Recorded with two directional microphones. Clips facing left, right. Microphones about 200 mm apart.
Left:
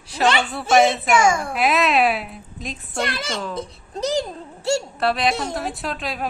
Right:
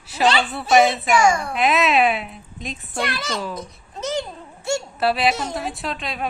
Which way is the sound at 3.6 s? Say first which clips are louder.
Left 4 dB; 35° left (ahead or behind).